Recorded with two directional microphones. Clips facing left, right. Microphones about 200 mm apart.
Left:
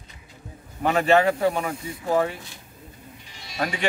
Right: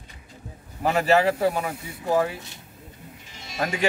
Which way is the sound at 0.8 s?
5° right (ahead or behind).